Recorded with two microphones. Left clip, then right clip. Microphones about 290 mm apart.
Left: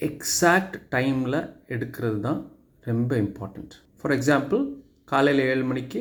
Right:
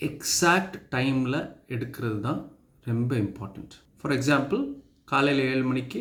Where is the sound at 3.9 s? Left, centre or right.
Right.